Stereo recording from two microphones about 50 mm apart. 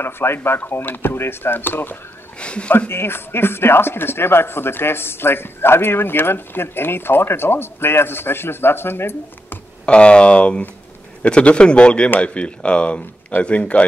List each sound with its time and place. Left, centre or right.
0.0 s speech: left
0.7 s speech: left
2.3 s speech: left
2.9 s speech: left
9.8 s speech: left